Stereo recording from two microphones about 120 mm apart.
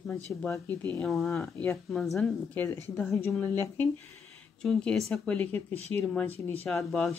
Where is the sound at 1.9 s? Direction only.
Centre (ahead or behind).